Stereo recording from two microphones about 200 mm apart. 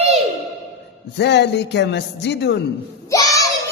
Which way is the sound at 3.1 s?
15° left (ahead or behind).